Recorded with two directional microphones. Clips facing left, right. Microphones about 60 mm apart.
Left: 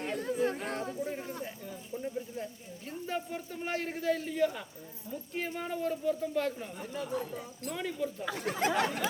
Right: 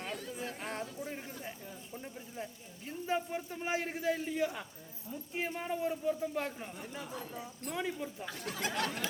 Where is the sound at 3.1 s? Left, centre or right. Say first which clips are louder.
Right 2 dB; centre.